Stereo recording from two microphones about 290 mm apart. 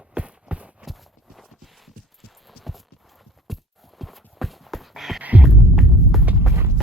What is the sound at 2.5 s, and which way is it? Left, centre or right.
Clip-clop, centre.